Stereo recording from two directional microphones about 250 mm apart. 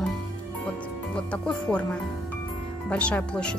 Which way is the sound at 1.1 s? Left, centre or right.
Centre.